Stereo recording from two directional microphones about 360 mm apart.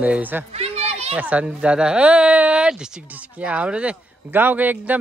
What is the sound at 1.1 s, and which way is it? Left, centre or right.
Speech, centre.